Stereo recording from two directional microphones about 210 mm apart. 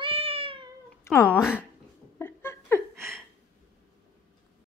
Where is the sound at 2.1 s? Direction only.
10° left (ahead or behind).